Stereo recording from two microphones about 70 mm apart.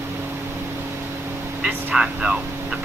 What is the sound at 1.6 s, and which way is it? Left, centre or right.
Speech, centre.